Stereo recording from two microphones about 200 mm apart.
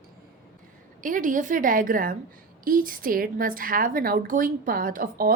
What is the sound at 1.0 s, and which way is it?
A woman's voice, 40° right (ahead or behind).